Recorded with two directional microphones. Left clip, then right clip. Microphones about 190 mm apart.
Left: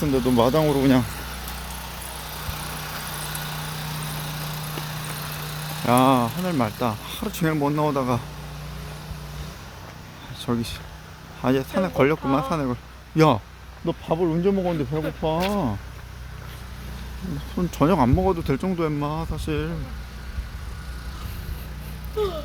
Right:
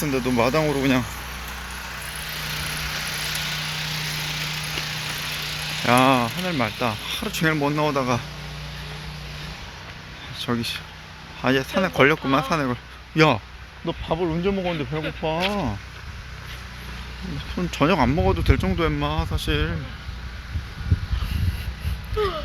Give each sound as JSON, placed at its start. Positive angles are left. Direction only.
{"t": 0.0, "sound": "speech", "side_deg": 20}
{"t": 2.0, "sound": "vehicle", "side_deg": 50}
{"t": 5.8, "sound": "speech", "side_deg": 10}
{"t": 10.5, "sound": "speech", "side_deg": 10}
{"t": 13.1, "sound": "speech", "side_deg": 20}
{"t": 17.6, "sound": "speech", "side_deg": 15}